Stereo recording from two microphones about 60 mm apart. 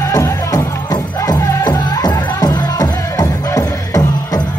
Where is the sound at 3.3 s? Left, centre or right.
Left.